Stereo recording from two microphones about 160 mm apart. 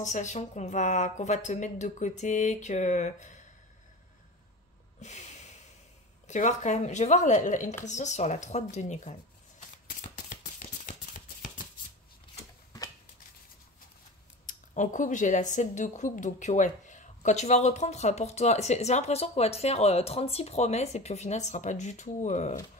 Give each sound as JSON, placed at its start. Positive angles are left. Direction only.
{"t": 0.0, "sound": "speech", "side_deg": 50}
{"t": 5.0, "sound": "snort", "side_deg": 45}
{"t": 6.2, "sound": "speech", "side_deg": 50}
{"t": 9.8, "sound": "a sound", "side_deg": 50}
{"t": 14.4, "sound": "speech", "side_deg": 50}